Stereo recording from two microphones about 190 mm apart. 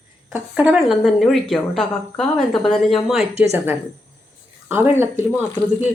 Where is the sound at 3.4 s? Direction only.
10° right (ahead or behind).